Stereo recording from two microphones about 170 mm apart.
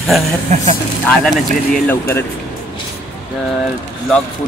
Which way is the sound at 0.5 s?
45° right (ahead or behind).